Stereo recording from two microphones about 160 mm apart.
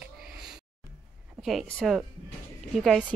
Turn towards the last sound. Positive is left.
turn(degrees=0)  # may be behind; listen again after turning